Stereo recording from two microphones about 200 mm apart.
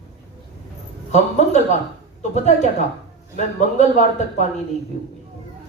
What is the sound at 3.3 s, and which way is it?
A man's voice, 35° left (ahead or behind).